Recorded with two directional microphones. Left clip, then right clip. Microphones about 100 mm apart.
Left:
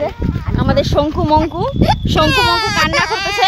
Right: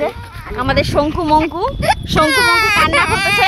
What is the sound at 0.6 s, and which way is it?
Speech, 35° left (ahead or behind).